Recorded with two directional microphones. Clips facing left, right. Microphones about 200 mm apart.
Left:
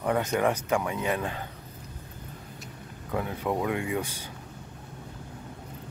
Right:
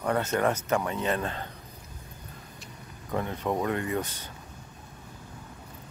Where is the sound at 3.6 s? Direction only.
10° left (ahead or behind).